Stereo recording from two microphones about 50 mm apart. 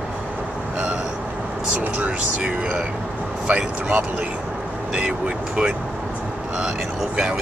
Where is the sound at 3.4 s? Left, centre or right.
Right.